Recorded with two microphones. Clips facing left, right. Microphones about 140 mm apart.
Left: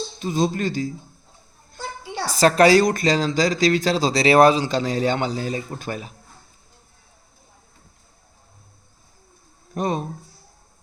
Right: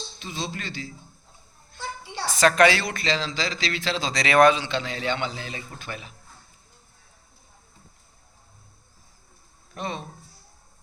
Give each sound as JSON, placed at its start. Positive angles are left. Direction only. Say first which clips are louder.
{"t": 0.2, "sound": "speech", "louder": "left 12 dB", "side_deg": 45}
{"t": 2.2, "sound": "a woman's voice", "louder": "left 3 dB", "side_deg": 35}
{"t": 9.7, "sound": "speech", "louder": "left 8 dB", "side_deg": 45}